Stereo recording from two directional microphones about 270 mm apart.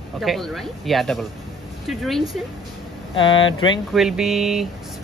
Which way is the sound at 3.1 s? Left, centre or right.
Centre.